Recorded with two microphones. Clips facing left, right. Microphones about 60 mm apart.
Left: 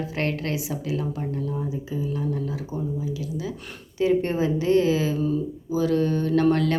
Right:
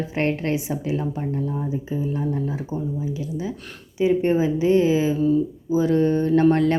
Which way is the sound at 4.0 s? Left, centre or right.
Centre.